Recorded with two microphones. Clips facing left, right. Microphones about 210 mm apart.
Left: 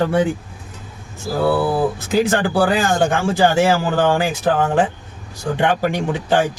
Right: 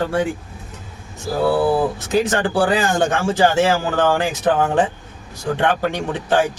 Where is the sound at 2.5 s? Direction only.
10° left (ahead or behind).